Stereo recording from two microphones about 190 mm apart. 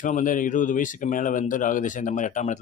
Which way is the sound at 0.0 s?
45° left (ahead or behind).